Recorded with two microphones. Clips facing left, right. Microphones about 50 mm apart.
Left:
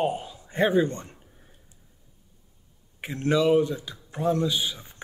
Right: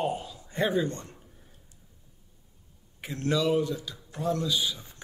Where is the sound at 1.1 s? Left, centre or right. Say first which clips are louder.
Even; centre.